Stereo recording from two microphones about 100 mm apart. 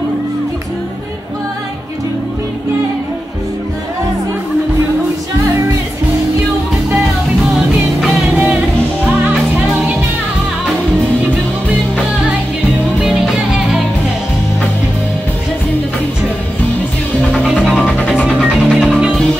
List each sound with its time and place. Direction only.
7.5 s music: centre (ahead or behind)
8.4 s music: 15° right (ahead or behind)
13.0 s music: 5° right (ahead or behind)
17.6 s music: 10° left (ahead or behind)